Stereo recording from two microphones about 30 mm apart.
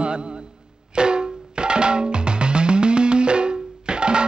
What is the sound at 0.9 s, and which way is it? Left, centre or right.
Music, right.